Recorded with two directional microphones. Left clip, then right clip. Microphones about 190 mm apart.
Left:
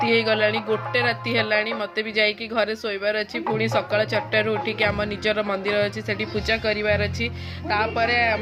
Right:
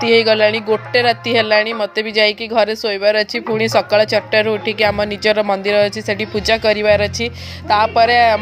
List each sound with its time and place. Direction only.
0.0 s a woman's voice: 30° right (ahead or behind)